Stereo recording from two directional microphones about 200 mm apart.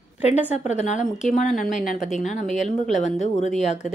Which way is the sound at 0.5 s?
35° left (ahead or behind).